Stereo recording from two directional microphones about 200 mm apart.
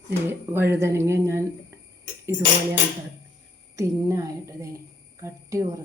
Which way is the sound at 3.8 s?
15° right (ahead or behind).